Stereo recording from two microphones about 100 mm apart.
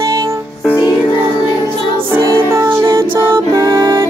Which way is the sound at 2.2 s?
35° right (ahead or behind).